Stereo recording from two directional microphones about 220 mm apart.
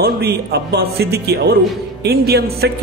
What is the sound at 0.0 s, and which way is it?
Speech, 45° right (ahead or behind).